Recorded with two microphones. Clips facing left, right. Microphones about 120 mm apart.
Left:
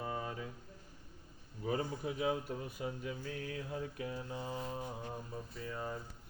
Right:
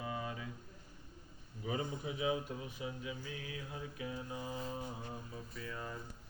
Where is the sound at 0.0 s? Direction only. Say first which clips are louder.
Left 1 dB; 45° left (ahead or behind).